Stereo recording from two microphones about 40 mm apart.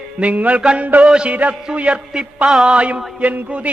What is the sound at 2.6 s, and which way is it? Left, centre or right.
Speech, right.